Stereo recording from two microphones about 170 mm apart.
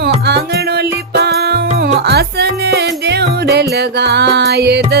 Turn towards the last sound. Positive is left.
turn(degrees=-75)  # may be behind; listen again after turning